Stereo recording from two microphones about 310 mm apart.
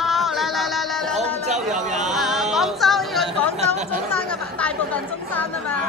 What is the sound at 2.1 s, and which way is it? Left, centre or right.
Chatter, centre.